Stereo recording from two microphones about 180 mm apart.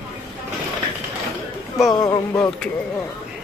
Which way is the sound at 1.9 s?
20° left (ahead or behind).